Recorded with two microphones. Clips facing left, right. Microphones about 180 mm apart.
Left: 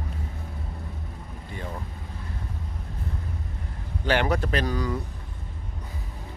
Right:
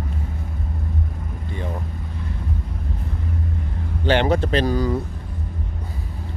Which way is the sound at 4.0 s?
25° right (ahead or behind).